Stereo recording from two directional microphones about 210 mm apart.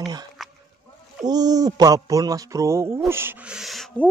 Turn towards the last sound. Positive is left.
turn(degrees=0)  # may be behind; listen again after turning